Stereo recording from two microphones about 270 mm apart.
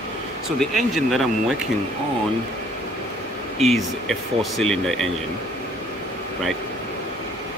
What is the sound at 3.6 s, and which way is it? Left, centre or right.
Speech, centre.